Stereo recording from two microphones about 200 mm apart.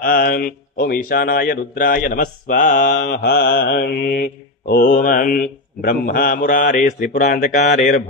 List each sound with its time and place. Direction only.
0.0 s a man's voice: 45° left (ahead or behind)